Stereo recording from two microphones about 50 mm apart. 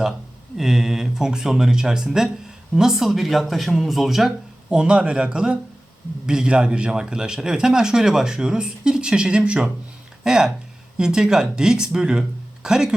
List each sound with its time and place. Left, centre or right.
0.5 s speech: centre
4.7 s speech: centre